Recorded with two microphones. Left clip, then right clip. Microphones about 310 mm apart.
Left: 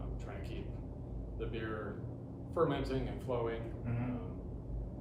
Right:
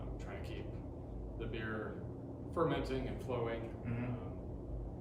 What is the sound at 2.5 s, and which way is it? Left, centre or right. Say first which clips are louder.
Speech: left 2 dB; centre.